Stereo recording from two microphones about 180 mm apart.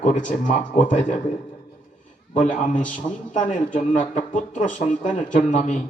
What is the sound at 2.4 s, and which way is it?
A man's voice, 45° left (ahead or behind).